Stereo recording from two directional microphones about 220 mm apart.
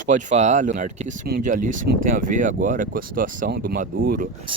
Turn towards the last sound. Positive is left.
turn(degrees=-25)  # may be behind; listen again after turning